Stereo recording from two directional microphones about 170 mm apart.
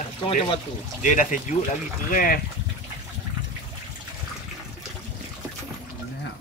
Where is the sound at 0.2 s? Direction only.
35° left (ahead or behind).